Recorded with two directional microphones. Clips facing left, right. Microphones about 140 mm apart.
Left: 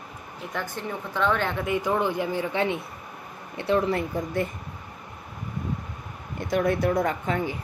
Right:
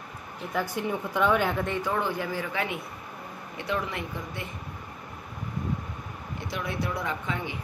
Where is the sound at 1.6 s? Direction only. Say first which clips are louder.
Left 4 dB; 15° left (ahead or behind); by 4.4 s 40° left (ahead or behind).